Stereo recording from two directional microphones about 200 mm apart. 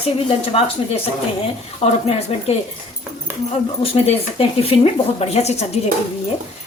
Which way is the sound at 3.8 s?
30° left (ahead or behind).